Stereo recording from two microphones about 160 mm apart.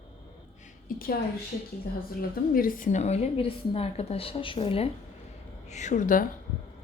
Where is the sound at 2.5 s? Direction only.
60° left (ahead or behind); by 4.9 s 35° left (ahead or behind).